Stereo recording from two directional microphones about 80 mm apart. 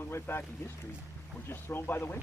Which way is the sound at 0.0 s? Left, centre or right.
Left.